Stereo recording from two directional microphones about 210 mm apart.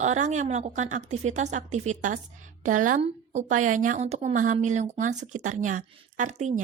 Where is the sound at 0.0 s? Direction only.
35° right (ahead or behind).